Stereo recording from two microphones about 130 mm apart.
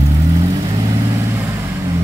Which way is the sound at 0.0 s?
25° right (ahead or behind).